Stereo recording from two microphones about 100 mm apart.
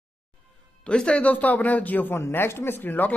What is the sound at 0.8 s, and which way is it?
A man's voice, 10° left (ahead or behind).